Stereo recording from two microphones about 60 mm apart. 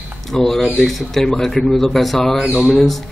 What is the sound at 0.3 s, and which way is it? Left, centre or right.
A man's voice, centre.